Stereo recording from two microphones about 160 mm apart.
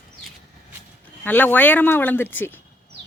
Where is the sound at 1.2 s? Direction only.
10° left (ahead or behind).